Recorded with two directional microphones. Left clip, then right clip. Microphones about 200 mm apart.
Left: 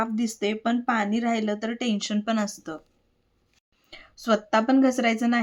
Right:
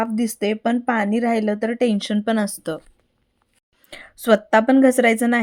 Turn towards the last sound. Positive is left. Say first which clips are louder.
# right 7 dB
turn(degrees=-40)  # may be behind; listen again after turning